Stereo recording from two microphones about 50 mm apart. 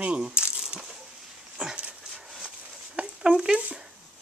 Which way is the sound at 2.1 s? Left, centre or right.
Centre.